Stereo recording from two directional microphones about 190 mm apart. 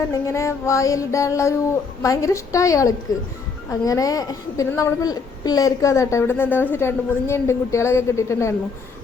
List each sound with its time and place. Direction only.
0.1 s a woman's voice: 15° left (ahead or behind)